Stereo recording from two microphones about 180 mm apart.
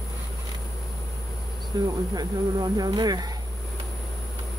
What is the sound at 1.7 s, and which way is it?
Speech, 20° right (ahead or behind).